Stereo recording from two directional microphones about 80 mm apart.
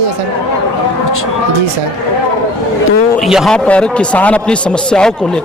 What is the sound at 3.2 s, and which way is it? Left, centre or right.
Speech, centre.